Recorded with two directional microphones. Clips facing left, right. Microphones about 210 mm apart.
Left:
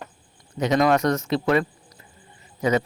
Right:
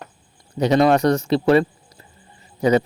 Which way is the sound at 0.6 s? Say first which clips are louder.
Right 4 dB; 35° right (ahead or behind).